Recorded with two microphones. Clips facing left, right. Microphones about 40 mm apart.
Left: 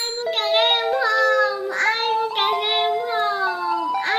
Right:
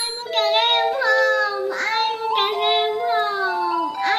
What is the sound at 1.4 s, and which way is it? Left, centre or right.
Child singing, left.